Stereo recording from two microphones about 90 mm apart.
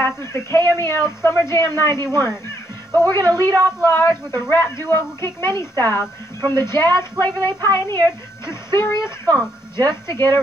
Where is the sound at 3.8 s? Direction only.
25° left (ahead or behind).